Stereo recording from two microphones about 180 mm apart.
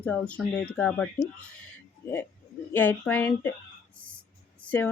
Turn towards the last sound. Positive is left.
turn(degrees=10)  # may be behind; listen again after turning